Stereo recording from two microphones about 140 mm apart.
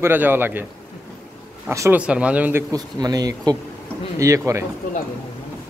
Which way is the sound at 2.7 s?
25° right (ahead or behind).